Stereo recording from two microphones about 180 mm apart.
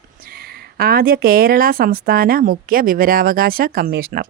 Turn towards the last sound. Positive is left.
turn(degrees=-55)  # may be behind; listen again after turning